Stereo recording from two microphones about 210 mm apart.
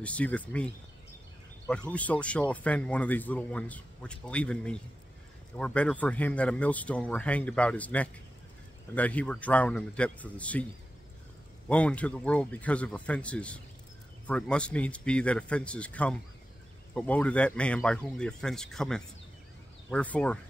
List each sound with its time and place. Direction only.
0.0 s speech: 5° left (ahead or behind)
1.7 s speech: 5° left (ahead or behind)
11.7 s speech: 5° left (ahead or behind)